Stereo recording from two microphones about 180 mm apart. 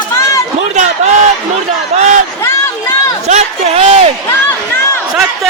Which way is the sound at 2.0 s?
40° right (ahead or behind).